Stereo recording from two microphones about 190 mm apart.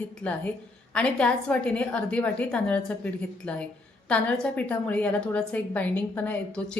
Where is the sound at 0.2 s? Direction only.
10° left (ahead or behind).